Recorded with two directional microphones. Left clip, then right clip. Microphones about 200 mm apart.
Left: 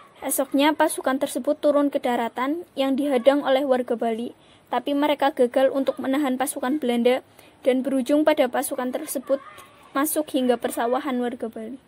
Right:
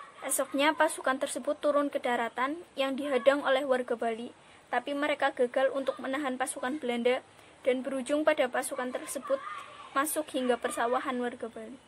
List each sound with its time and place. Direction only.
0.2 s speech: 30° left (ahead or behind)